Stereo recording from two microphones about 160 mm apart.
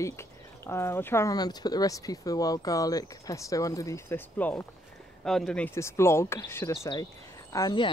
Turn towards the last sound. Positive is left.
turn(degrees=25)  # may be behind; listen again after turning